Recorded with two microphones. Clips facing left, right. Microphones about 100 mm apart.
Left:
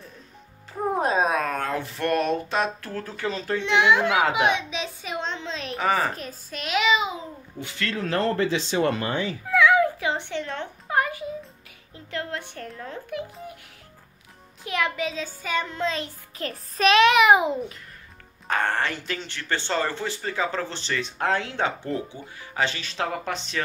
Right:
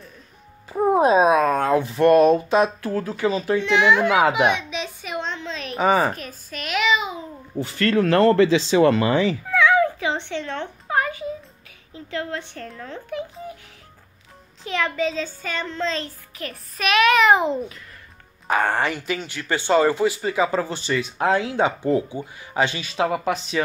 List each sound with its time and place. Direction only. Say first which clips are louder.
0.9 s a sound: right 7 dB; 15° right (ahead or behind)
2.5 s speech: right 7 dB; 15° right (ahead or behind)
4.5 s a sound: right 2 dB; 30° left (ahead or behind)
5.8 s a woman's voice: right 5 dB; 20° right (ahead or behind)
6.1 s a child's voice: right 1 dB; 30° left (ahead or behind)
7.6 s speech: right 8 dB; 45° right (ahead or behind)
7.9 s speech: right 9 dB; 65° right (ahead or behind); by 9.4 s 90° right
9.5 s a sound: left 1 dB; 5° left (ahead or behind)
12.7 s a child's voice: right 2 dB; 10° left (ahead or behind)
14.6 s a child's voice: right 3 dB; 10° left (ahead or behind)
16.3 s music: left 4 dB; 30° left (ahead or behind)
17.1 s a child's voice: right 1 dB; 10° left (ahead or behind)
18.5 s speech: right 4 dB; 10° right (ahead or behind)